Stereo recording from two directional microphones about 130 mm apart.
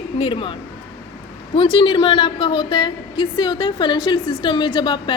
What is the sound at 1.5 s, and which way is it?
A woman's voice, 40° left (ahead or behind).